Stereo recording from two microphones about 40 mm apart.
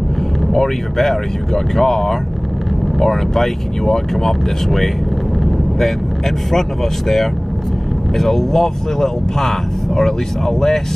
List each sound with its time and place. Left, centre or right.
0.5 s speech: centre